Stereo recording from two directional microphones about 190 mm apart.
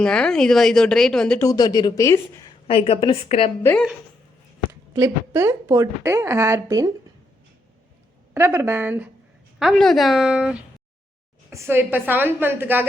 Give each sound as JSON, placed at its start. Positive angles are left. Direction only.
{"t": 0.0, "sound": "speech", "side_deg": 5}
{"t": 1.5, "sound": "speech", "side_deg": 20}
{"t": 2.5, "sound": "a woman's voice", "side_deg": 30}
{"t": 3.6, "sound": "speech", "side_deg": 10}
{"t": 4.7, "sound": "speech", "side_deg": -15}
{"t": 8.3, "sound": "speech", "side_deg": -10}